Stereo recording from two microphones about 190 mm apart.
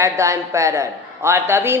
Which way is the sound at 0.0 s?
15° right (ahead or behind).